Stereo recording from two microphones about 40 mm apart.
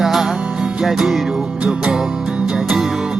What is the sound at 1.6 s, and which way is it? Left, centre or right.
Music, right.